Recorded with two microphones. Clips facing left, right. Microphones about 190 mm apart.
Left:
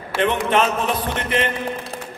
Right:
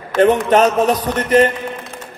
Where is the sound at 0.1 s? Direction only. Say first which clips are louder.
Right 8 dB; 10° left (ahead or behind).